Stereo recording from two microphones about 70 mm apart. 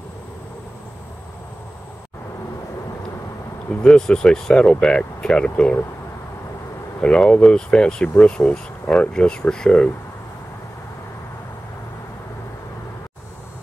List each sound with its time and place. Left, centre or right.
3.8 s speech: centre
7.0 s speech: centre